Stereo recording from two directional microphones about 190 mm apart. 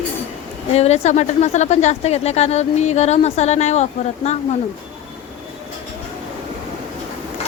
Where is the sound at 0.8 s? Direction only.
35° left (ahead or behind).